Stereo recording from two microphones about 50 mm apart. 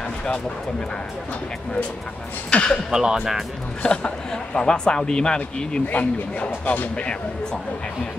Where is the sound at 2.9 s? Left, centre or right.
Centre.